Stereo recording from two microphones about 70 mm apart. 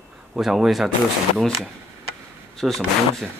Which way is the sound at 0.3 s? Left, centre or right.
Centre.